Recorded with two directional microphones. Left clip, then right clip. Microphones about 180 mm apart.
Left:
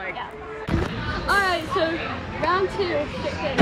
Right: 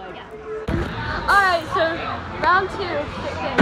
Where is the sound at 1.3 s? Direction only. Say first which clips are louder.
Right 5 dB; centre (ahead or behind).